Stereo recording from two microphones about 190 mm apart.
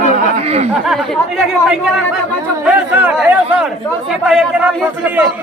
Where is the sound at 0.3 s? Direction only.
35° right (ahead or behind).